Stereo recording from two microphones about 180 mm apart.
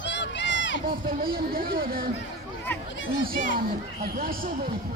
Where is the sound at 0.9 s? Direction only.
55° right (ahead or behind).